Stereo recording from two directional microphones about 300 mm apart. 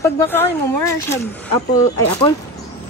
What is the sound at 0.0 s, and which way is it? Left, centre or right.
A woman's voice, centre.